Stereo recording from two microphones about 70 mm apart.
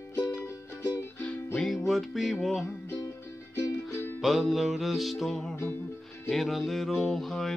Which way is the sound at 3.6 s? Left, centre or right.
Left.